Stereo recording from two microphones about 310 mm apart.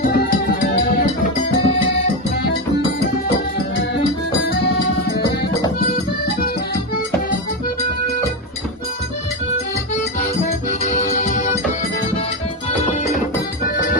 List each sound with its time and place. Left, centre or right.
0.0 s music: left
10.7 s music: left